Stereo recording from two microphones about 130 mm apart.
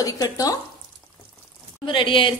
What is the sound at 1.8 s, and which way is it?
Speech, 40° left (ahead or behind).